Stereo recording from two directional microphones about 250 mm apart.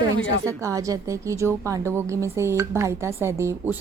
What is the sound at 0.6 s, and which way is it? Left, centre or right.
Speech, centre.